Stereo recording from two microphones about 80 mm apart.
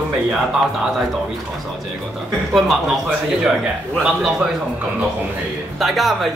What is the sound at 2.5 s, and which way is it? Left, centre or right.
Speech, centre.